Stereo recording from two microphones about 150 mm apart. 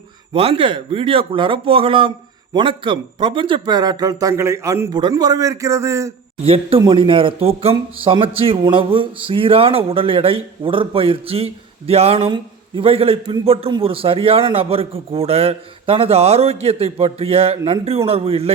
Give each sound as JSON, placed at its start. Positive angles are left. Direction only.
{"t": 0.3, "sound": "speech", "side_deg": -40}
{"t": 6.4, "sound": "speech", "side_deg": -40}